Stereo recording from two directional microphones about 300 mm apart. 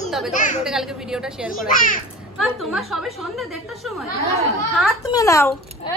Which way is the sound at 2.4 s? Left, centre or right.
Centre.